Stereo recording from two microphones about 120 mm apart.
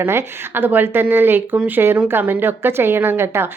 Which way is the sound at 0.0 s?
20° right (ahead or behind).